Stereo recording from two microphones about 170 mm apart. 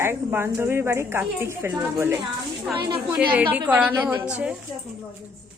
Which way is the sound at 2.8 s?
30° right (ahead or behind).